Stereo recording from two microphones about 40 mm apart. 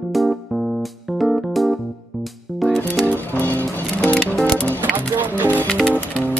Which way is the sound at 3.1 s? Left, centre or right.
Left.